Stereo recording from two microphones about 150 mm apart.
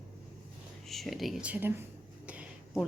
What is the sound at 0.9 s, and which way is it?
Speech, centre (ahead or behind).